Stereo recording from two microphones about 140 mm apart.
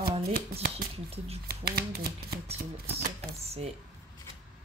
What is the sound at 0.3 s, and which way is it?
Speech, 90° right.